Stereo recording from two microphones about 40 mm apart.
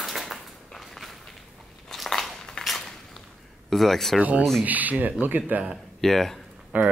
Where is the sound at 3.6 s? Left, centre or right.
Centre.